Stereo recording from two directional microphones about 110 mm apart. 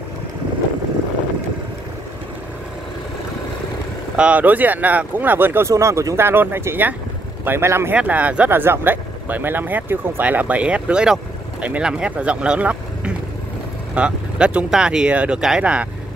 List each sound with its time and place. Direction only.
4.2 s speech: 15° right (ahead or behind)